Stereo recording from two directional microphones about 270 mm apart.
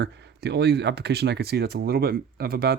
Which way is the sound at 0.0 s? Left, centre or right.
Right.